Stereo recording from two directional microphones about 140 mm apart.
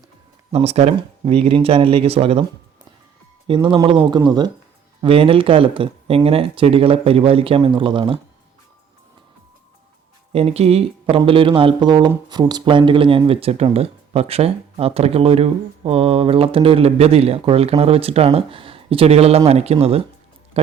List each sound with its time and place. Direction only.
0.5 s speech: 50° right (ahead or behind)
3.4 s speech: 35° right (ahead or behind)
4.9 s speech: 40° right (ahead or behind)
10.3 s speech: 45° right (ahead or behind)